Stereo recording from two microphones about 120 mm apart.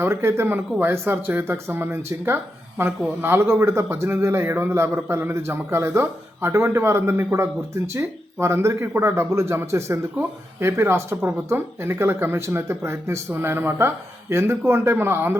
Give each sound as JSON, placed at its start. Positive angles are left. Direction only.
{"t": 0.0, "sound": "speech", "side_deg": -20}